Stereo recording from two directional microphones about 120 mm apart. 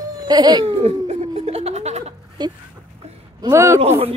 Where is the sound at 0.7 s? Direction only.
55° right (ahead or behind).